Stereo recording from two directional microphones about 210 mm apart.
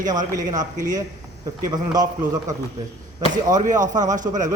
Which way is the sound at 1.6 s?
20° right (ahead or behind).